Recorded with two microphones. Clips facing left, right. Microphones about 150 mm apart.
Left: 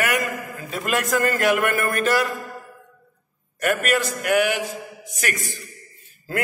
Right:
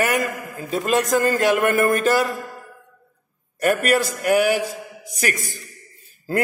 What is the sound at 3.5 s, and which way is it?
A man's voice, 35° right (ahead or behind).